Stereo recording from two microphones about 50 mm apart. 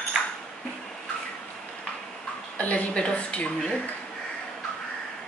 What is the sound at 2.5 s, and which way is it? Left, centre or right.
Speech, left.